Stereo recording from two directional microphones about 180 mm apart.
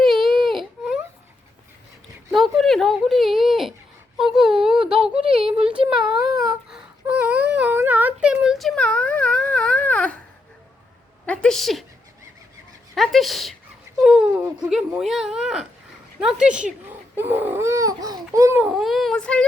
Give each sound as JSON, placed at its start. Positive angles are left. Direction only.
{"t": 0.0, "sound": "baby cry", "side_deg": 0}
{"t": 2.3, "sound": "speech", "side_deg": 0}
{"t": 5.3, "sound": "speech", "side_deg": -30}
{"t": 5.5, "sound": "speech", "side_deg": -5}
{"t": 6.7, "sound": "a sound", "side_deg": -5}
{"t": 11.3, "sound": "speech", "side_deg": 5}
{"t": 12.9, "sound": "speech", "side_deg": 0}
{"t": 18.6, "sound": "speech", "side_deg": 0}